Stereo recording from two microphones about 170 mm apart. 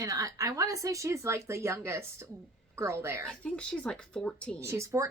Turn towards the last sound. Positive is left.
turn(degrees=-20)  # may be behind; listen again after turning